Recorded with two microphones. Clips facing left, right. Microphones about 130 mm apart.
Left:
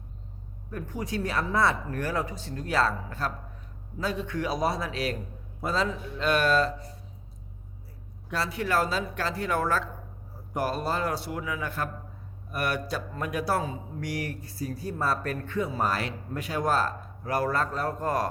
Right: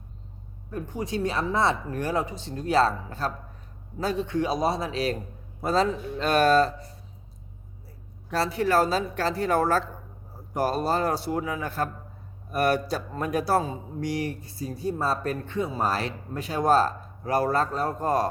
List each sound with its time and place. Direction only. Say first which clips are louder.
0.7 s a man's voice: right 2 dB; 25° right (ahead or behind)
5.6 s speech: right 5 dB; 40° right (ahead or behind)
8.3 s a man's voice: right 4 dB; 35° right (ahead or behind)